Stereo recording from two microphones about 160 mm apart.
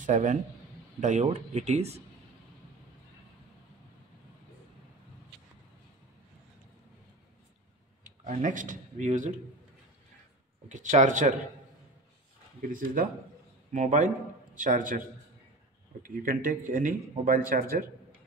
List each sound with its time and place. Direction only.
0.0 s a man's voice: 50° right (ahead or behind)
8.2 s speech: 55° right (ahead or behind)
10.7 s speech: 50° right (ahead or behind)
12.6 s speech: 60° right (ahead or behind)